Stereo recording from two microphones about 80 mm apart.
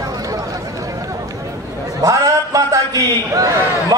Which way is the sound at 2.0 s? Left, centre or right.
Right.